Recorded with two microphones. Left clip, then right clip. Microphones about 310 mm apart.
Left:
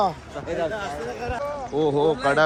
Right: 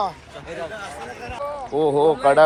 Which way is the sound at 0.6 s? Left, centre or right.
Left.